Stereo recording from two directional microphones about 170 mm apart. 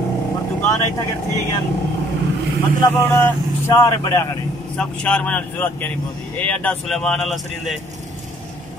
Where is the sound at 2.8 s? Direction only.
15° left (ahead or behind).